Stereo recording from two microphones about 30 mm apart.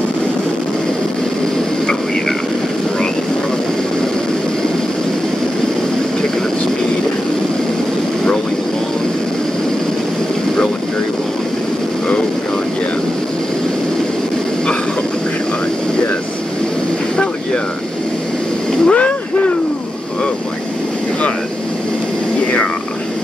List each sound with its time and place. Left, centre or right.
18.9 s boat: left